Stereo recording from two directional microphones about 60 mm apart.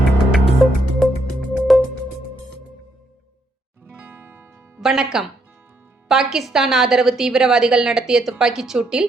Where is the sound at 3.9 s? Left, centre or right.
Right.